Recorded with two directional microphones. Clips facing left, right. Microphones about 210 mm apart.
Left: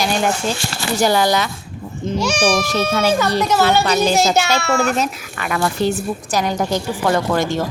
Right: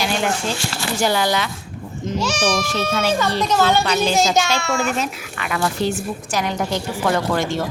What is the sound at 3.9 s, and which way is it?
Speech, 45° left (ahead or behind).